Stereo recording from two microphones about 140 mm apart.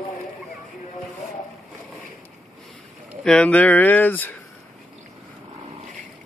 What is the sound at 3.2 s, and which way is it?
Speech, 10° left (ahead or behind).